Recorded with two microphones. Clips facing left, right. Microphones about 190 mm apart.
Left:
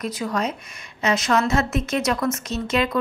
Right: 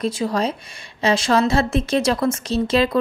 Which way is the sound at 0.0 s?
30° right (ahead or behind).